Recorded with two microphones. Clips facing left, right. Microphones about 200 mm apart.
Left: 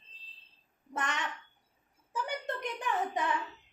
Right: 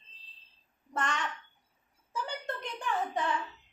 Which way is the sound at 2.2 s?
15° left (ahead or behind).